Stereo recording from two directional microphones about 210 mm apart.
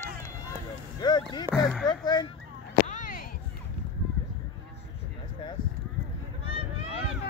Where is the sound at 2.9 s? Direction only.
40° left (ahead or behind).